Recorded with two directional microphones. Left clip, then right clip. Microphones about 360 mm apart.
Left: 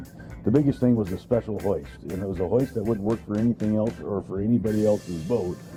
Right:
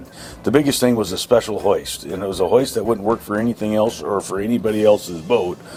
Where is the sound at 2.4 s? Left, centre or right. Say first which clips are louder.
Right 9 dB; right.